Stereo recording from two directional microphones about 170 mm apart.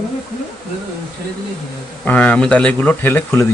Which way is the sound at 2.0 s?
10° left (ahead or behind).